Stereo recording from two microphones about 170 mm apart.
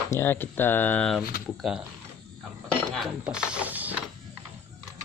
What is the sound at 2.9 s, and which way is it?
Speech, 5° right (ahead or behind).